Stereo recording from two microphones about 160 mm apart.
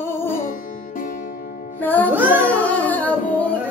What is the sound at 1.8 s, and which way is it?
Music, 10° left (ahead or behind).